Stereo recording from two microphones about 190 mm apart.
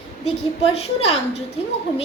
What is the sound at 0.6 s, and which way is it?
Speech, 30° left (ahead or behind).